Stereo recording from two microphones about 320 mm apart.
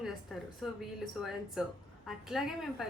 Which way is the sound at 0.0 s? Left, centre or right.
Centre.